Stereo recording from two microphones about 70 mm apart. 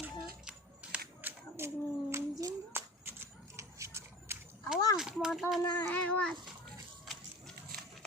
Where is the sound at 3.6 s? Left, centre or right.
Right.